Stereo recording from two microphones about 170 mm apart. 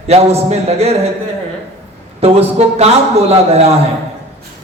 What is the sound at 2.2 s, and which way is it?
A man's voice, 35° right (ahead or behind).